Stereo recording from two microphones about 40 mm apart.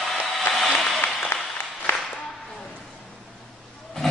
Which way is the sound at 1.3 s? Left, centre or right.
Left.